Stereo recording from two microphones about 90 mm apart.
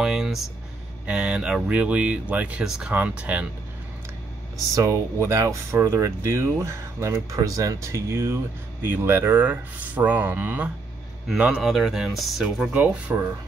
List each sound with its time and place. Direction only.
0.0 s a sound: 5° right (ahead or behind)
1.0 s speech: 10° right (ahead or behind)
4.7 s speech: 35° right (ahead or behind); by 11.6 s 15° right (ahead or behind)
11.6 s speech: centre (ahead or behind)
12.7 s speech: 15° right (ahead or behind)